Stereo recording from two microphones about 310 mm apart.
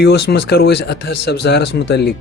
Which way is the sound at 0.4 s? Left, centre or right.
Left.